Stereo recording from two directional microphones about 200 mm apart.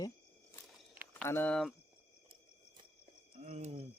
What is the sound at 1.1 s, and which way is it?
Speech, 10° left (ahead or behind).